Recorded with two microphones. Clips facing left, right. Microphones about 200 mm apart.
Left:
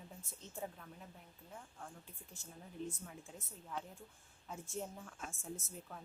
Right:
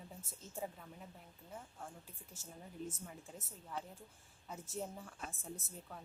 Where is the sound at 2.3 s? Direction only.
40° right (ahead or behind).